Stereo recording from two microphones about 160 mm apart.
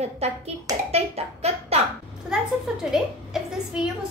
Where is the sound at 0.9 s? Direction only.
40° right (ahead or behind).